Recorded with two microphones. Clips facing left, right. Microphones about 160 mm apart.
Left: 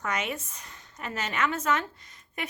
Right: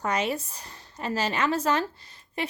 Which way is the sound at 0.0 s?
35° right (ahead or behind).